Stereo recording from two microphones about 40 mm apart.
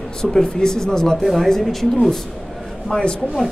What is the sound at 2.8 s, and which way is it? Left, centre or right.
Speech, left.